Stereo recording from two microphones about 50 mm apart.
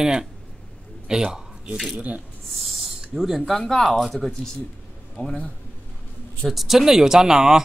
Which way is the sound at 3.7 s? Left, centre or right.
Centre.